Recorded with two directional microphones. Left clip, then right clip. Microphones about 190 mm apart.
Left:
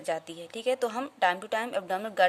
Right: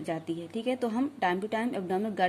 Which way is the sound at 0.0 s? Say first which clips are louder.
Left 1 dB; 25° left (ahead or behind).